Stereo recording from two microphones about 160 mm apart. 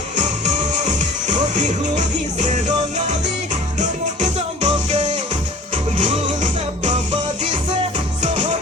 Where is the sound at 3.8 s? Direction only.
45° right (ahead or behind).